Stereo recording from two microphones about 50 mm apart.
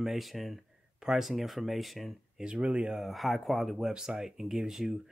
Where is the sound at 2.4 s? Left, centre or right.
Right.